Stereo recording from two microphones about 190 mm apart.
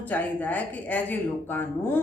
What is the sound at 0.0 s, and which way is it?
Speech, 10° left (ahead or behind).